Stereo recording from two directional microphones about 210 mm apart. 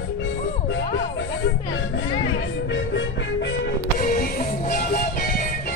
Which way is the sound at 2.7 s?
60° left (ahead or behind).